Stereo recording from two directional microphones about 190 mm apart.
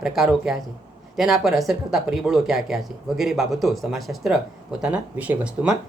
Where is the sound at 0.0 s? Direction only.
Centre (ahead or behind).